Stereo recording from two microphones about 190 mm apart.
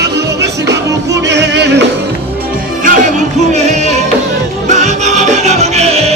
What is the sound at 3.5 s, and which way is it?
Music, 35° right (ahead or behind).